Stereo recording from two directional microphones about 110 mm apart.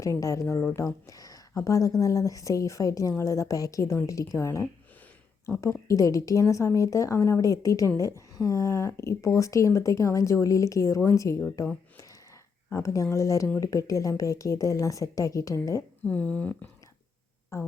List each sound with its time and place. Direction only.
0.0 s a woman's voice: 30° left (ahead or behind)
12.7 s a woman's voice: 30° left (ahead or behind)
16.0 s speech: 10° left (ahead or behind)
17.5 s a woman's voice: 25° left (ahead or behind)